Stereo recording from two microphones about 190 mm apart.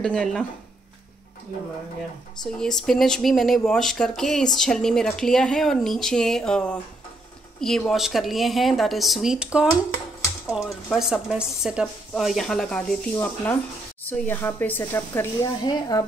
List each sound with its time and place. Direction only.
0.0 s speech: 5° left (ahead or behind)
2.4 s speech: 5° left (ahead or behind); by 16.0 s 20° left (ahead or behind)